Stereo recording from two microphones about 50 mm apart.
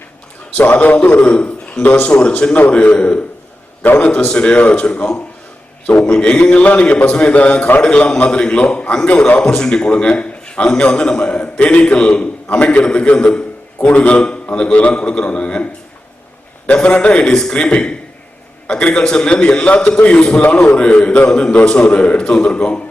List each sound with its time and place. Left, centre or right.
0.6 s a man's voice: left
4.3 s a man's voice: centre